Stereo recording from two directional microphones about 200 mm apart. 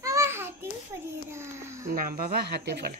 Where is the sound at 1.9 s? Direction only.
45° right (ahead or behind).